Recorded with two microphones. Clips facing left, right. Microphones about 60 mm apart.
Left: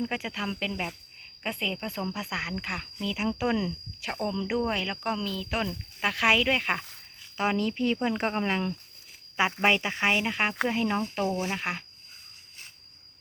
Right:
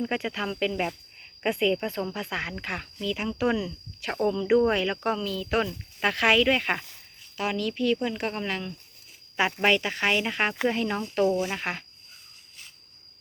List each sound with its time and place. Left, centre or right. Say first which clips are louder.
0.1 s speech: right 3 dB; centre
7.3 s speech: left 1 dB; left
9.4 s speech: right 1 dB; centre
11.2 s speech: right 10 dB; left
11.5 s speech: right 1 dB; centre